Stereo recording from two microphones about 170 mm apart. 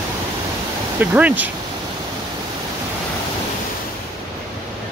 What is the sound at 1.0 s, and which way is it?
Speech, 10° right (ahead or behind).